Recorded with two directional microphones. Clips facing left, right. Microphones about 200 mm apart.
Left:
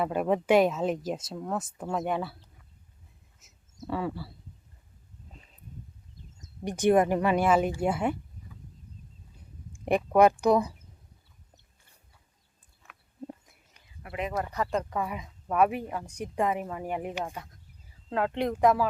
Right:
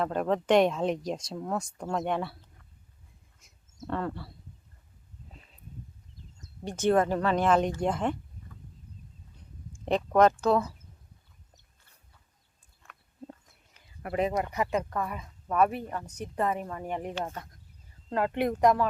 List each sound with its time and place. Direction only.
0.0 s speech: 10° left (ahead or behind)
6.7 s a woman's voice: 15° left (ahead or behind)
9.8 s a woman's voice: 10° left (ahead or behind)
14.0 s speech: 55° right (ahead or behind)
14.5 s speech: 10° right (ahead or behind)
14.8 s a woman's voice: 10° left (ahead or behind)
18.1 s speech: 5° right (ahead or behind)